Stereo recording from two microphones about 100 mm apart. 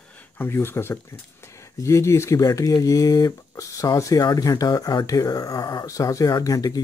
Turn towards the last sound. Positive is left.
turn(degrees=40)  # may be behind; listen again after turning